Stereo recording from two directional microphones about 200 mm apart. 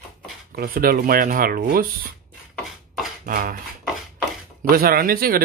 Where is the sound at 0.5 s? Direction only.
45° right (ahead or behind).